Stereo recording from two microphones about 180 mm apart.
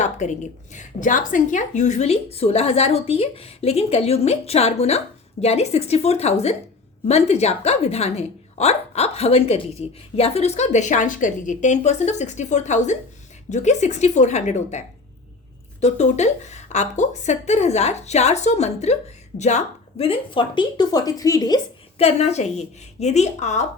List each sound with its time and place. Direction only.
0.0 s a woman's voice: 40° left (ahead or behind); by 21.6 s 20° left (ahead or behind)
21.9 s a woman's voice: 35° left (ahead or behind)